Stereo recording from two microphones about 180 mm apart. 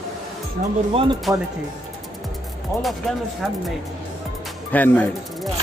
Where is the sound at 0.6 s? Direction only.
50° right (ahead or behind).